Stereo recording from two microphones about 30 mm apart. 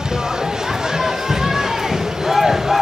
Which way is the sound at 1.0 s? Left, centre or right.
Centre.